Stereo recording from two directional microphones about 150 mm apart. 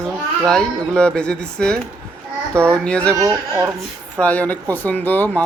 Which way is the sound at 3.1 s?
20° right (ahead or behind).